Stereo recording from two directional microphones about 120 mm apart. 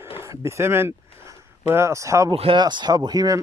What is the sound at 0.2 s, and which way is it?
Speech, 25° right (ahead or behind).